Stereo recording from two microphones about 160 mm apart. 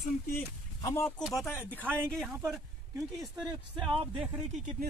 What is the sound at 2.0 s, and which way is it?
Speech, 5° left (ahead or behind).